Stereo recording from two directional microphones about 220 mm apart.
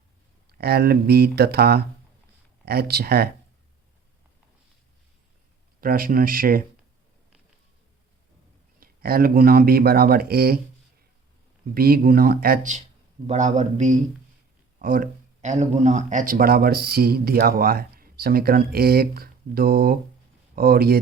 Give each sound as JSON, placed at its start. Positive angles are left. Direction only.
{"t": 0.6, "sound": "speech", "side_deg": -45}
{"t": 5.8, "sound": "speech", "side_deg": -40}
{"t": 8.8, "sound": "speech", "side_deg": -40}
{"t": 11.7, "sound": "speech", "side_deg": -45}